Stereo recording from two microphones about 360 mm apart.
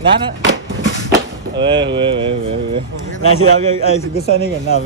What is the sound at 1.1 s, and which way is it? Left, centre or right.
Speech, centre.